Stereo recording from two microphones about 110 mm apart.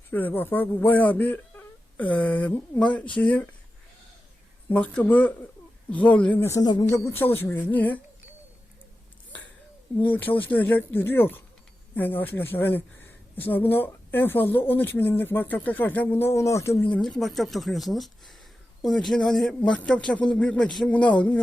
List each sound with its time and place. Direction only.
0.1 s a woman's voice: 15° left (ahead or behind)
4.7 s a woman's voice: 15° left (ahead or behind)
6.5 s speech: 35° left (ahead or behind)
6.9 s a woman's voice: 25° left (ahead or behind)
10.0 s a woman's voice: 15° left (ahead or behind)
17.0 s a woman's voice: 5° left (ahead or behind)